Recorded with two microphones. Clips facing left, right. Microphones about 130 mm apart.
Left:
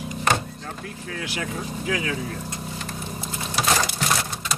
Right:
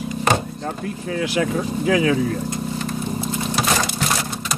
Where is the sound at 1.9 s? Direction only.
90° right.